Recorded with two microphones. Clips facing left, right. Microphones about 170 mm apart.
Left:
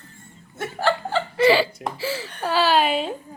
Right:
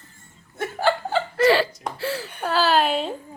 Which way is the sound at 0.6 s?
Centre (ahead or behind).